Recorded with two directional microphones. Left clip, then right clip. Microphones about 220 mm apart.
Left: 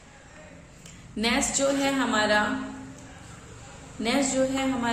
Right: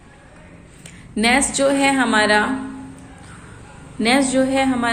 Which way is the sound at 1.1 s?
35° right (ahead or behind).